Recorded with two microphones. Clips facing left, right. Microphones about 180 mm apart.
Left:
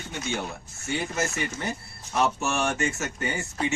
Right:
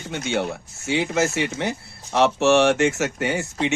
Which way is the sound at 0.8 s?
90° right.